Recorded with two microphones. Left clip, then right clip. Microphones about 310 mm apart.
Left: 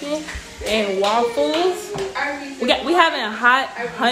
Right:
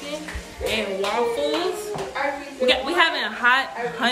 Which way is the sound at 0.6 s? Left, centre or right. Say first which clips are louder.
Left 5 dB; centre.